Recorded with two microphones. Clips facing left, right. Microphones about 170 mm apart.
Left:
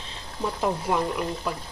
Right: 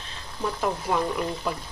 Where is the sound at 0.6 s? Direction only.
10° left (ahead or behind).